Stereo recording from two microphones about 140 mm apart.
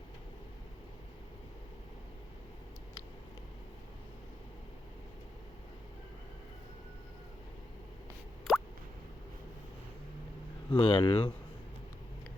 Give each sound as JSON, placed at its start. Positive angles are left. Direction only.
{"t": 8.5, "sound": "plop", "side_deg": 0}
{"t": 10.8, "sound": "speech", "side_deg": 40}